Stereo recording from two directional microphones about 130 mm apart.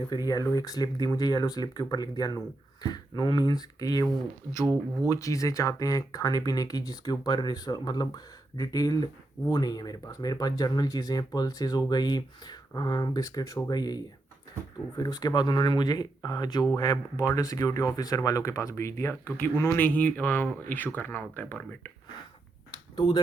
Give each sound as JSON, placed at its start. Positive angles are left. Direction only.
{"t": 0.3, "sound": "speech", "side_deg": 30}
{"t": 5.0, "sound": "speech", "side_deg": 25}
{"t": 23.0, "sound": "speech", "side_deg": 35}